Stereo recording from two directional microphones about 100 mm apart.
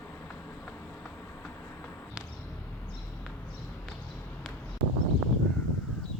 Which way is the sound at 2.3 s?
15° left (ahead or behind).